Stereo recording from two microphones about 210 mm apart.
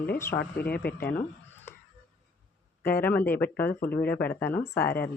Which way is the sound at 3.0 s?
10° left (ahead or behind).